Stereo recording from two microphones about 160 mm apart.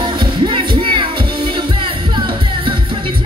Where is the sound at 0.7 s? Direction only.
35° right (ahead or behind).